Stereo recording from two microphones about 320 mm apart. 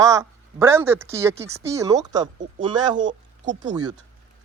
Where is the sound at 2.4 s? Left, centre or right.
Right.